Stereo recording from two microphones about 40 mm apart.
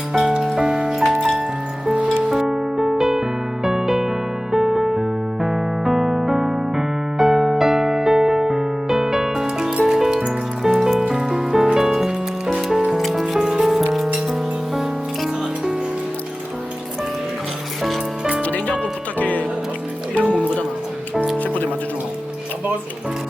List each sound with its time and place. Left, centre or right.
0.1 s music: centre
2.3 s music: centre
4.5 s electric piano: centre
9.8 s music: centre
13.4 s music: centre
18.4 s music: left